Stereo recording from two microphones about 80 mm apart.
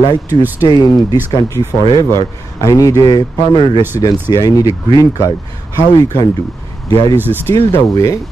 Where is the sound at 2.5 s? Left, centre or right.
Left.